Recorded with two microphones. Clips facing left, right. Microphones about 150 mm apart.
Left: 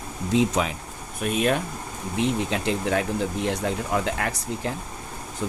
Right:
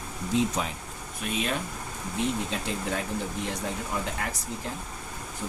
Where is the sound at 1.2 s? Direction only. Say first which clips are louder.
Left 7 dB; 55° left (ahead or behind).